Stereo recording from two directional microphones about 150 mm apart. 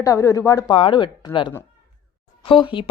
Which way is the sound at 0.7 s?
35° left (ahead or behind).